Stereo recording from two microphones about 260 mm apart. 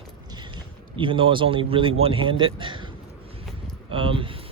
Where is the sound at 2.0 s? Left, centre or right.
Centre.